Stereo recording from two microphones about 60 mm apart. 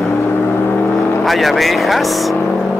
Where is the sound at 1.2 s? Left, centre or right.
Centre.